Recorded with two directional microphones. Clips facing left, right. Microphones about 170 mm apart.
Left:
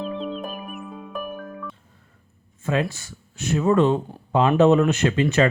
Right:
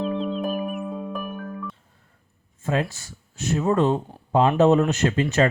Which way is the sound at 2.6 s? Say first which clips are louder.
Left 1 dB; 40° right (ahead or behind).